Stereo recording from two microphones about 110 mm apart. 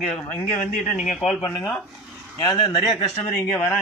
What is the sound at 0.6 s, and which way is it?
Speech, 90° left.